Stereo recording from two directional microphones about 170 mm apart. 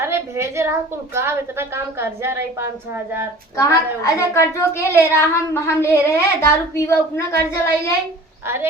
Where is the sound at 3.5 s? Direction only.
20° left (ahead or behind).